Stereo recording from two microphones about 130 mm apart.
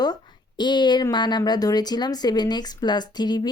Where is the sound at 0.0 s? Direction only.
35° left (ahead or behind).